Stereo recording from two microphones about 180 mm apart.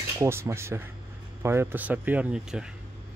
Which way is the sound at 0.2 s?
15° right (ahead or behind).